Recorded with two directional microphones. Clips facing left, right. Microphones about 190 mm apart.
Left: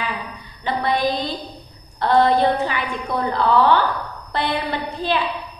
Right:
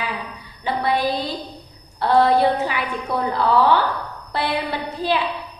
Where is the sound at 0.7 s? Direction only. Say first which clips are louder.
Even; 5° right (ahead or behind).